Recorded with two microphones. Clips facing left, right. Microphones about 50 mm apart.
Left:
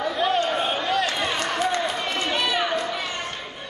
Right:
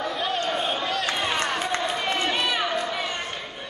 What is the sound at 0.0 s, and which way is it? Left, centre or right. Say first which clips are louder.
Chatter: left 4 dB; centre.